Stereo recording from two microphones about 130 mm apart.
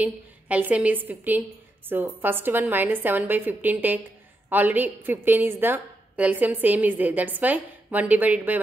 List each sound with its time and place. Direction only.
0.0 s a woman's voice: 10° right (ahead or behind)